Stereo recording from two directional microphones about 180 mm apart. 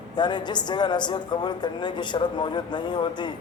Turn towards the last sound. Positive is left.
turn(degrees=25)  # may be behind; listen again after turning